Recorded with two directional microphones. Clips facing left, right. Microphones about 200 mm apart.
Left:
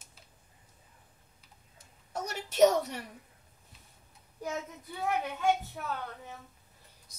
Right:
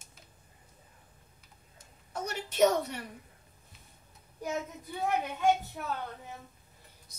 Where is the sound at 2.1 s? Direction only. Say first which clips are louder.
Even; 40° left (ahead or behind).